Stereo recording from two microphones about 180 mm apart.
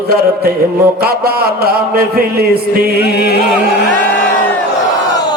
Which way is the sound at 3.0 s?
65° left (ahead or behind).